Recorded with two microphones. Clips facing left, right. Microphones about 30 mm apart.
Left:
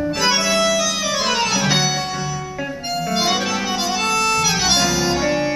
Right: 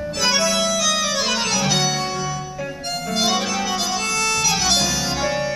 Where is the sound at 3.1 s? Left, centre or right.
Left.